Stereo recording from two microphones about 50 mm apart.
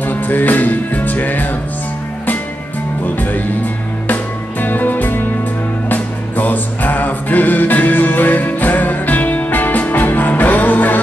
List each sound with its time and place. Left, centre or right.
0.0 s music: left
3.2 s music: left